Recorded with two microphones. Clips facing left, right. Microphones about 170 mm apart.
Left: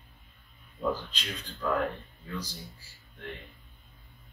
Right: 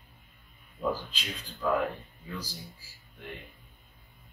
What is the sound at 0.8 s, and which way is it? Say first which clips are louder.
A man's voice: even; 5° right (ahead or behind).